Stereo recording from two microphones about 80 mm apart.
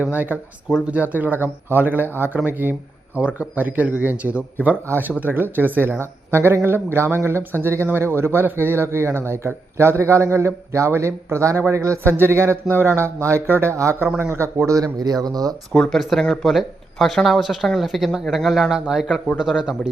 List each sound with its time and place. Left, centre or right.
0.0 s a man's voice: right
14.9 s speech: right
15.7 s speech: centre